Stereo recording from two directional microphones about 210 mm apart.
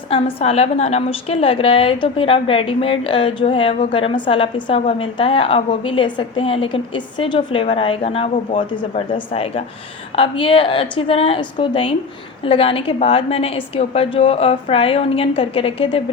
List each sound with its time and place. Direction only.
0.1 s a woman's voice: 25° left (ahead or behind)